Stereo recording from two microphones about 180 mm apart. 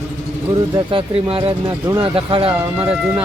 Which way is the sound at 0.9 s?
30° right (ahead or behind).